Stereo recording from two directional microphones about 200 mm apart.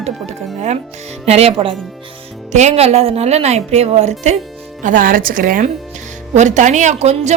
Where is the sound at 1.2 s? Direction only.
30° right (ahead or behind).